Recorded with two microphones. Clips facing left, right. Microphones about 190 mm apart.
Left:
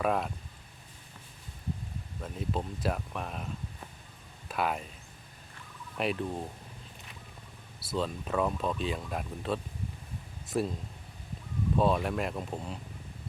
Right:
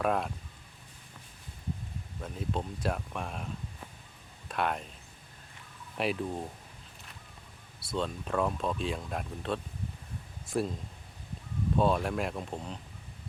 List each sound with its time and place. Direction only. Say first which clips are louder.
0.0 s speech: even; centre (ahead or behind)
2.2 s speech: left 1 dB; centre (ahead or behind)
6.0 s speech: even; centre (ahead or behind)
7.9 s speech: left 1 dB; centre (ahead or behind)
11.8 s speech: even; centre (ahead or behind)